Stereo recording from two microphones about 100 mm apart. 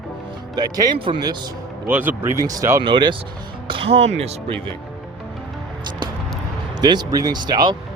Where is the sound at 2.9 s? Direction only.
50° right (ahead or behind).